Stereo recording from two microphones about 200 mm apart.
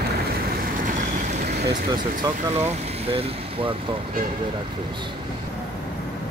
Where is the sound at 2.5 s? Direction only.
30° right (ahead or behind).